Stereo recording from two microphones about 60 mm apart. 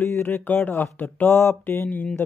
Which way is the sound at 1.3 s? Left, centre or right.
Left.